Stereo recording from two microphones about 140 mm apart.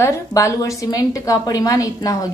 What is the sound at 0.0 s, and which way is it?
A woman's voice, 20° left (ahead or behind).